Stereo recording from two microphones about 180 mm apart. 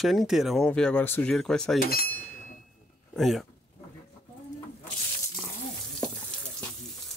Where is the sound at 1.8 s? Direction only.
55° left (ahead or behind).